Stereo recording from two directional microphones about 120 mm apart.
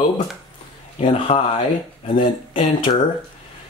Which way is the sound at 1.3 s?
60° left (ahead or behind).